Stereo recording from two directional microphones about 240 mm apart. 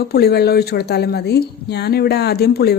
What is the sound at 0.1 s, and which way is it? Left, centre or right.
Speech, left.